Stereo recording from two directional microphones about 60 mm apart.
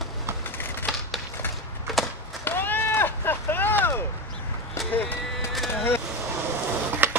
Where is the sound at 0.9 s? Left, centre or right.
Centre.